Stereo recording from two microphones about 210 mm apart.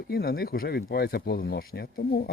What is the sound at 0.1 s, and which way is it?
Speech, 45° left (ahead or behind).